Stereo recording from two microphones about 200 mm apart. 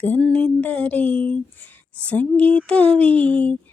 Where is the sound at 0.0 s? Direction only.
5° left (ahead or behind).